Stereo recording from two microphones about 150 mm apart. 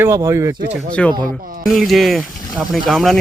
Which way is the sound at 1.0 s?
5° left (ahead or behind).